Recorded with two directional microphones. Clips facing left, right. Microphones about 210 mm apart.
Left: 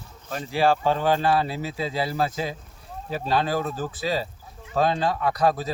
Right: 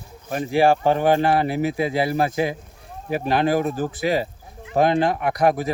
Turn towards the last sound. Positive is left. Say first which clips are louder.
# right 3 dB
turn(degrees=-15)  # may be behind; listen again after turning